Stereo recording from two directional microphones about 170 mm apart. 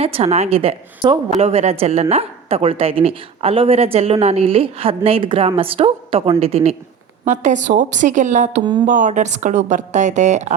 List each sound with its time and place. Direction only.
0.0 s a woman's voice: 35° right (ahead or behind)
8.6 s speech: 30° right (ahead or behind)
8.9 s a woman's voice: 45° right (ahead or behind)